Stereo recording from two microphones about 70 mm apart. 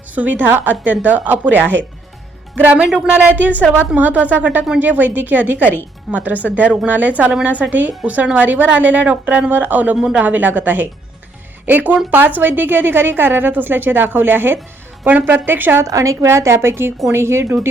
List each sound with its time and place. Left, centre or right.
0.1 s a woman's voice: right
15.8 s a woman's voice: right